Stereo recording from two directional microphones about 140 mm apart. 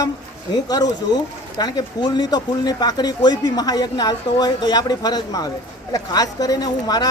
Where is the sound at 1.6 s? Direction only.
30° left (ahead or behind).